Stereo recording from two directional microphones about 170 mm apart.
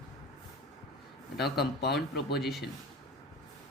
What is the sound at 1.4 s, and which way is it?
Speech, 70° left (ahead or behind).